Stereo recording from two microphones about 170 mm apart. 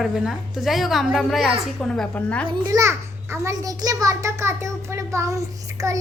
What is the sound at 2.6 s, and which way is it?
A child's voice, 15° right (ahead or behind).